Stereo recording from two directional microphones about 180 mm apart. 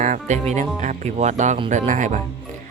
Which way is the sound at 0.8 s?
40° right (ahead or behind).